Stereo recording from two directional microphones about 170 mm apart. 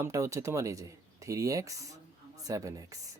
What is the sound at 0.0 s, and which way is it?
Speech, 15° right (ahead or behind).